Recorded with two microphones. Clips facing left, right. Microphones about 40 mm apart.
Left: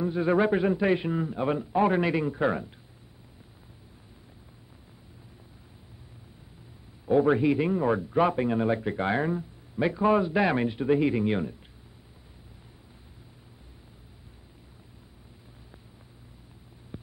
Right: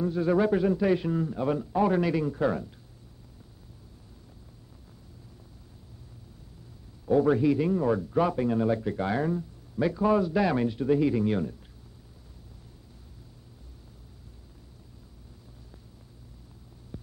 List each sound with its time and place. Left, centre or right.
0.0 s a man's voice: left
7.1 s a man's voice: left
16.9 s a sound: left